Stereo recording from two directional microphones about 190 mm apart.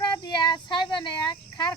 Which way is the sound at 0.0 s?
20° left (ahead or behind).